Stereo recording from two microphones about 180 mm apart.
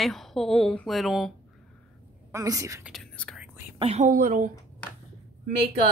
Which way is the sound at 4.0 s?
50° right (ahead or behind).